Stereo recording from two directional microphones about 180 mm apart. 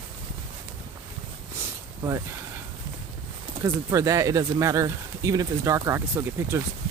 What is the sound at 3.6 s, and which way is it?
Speech, 15° right (ahead or behind).